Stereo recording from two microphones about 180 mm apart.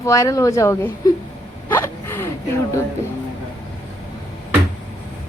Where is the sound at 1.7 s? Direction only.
10° left (ahead or behind).